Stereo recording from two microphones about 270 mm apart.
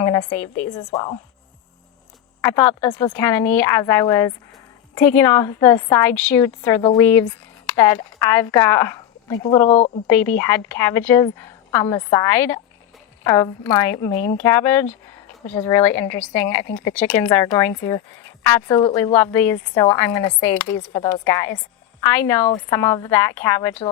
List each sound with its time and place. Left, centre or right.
0.0 s a woman's voice: centre
2.4 s a woman's voice: centre
9.6 s speech: left
10.1 s a woman's voice: centre